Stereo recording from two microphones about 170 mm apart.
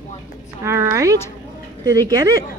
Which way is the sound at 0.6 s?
15° right (ahead or behind).